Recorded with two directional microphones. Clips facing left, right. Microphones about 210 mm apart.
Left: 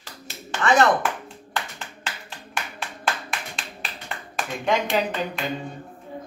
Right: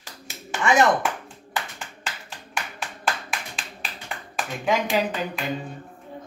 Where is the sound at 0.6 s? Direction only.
15° right (ahead or behind).